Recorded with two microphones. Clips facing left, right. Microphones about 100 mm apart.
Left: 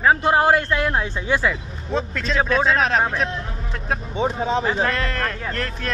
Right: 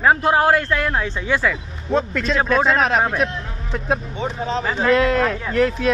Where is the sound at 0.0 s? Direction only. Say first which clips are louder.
Right 1 dB; centre (ahead or behind).